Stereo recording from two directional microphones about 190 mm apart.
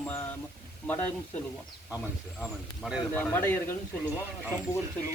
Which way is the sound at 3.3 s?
10° left (ahead or behind).